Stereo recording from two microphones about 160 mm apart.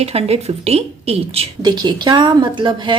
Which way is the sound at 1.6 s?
25° right (ahead or behind).